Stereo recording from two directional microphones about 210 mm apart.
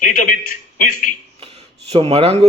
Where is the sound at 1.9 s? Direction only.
30° right (ahead or behind).